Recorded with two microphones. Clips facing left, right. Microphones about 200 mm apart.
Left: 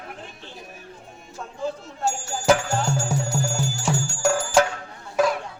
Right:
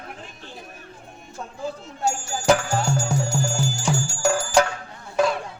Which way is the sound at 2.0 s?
Centre (ahead or behind).